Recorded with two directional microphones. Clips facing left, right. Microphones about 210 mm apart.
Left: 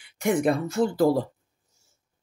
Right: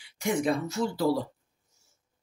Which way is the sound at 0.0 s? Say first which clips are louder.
Left 5 dB; 55° left (ahead or behind).